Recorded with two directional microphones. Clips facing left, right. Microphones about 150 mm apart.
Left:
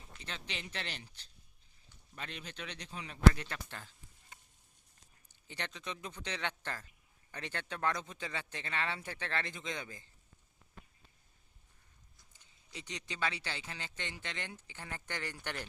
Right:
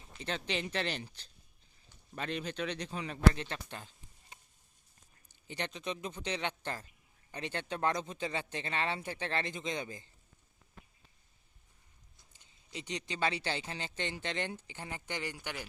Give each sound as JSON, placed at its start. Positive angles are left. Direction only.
{"t": 0.7, "sound": "speech", "side_deg": -90}
{"t": 2.1, "sound": "speech", "side_deg": -40}
{"t": 3.3, "sound": "speech", "side_deg": -25}
{"t": 5.5, "sound": "speech", "side_deg": -20}
{"t": 12.4, "sound": "speech", "side_deg": -20}